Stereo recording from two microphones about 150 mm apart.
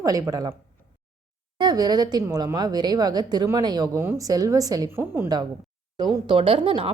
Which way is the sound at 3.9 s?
15° right (ahead or behind).